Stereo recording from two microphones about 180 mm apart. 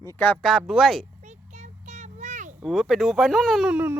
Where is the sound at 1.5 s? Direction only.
40° right (ahead or behind).